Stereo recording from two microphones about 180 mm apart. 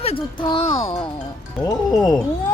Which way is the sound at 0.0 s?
30° left (ahead or behind).